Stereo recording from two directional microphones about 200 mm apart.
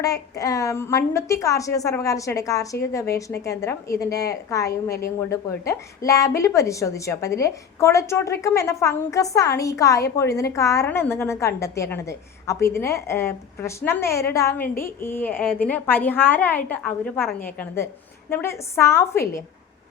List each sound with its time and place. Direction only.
0.0 s a woman's voice: 15° left (ahead or behind)
4.9 s a woman's voice: 50° left (ahead or behind)
5.3 s a woman's voice: 15° left (ahead or behind)
18.3 s a woman's voice: 10° left (ahead or behind)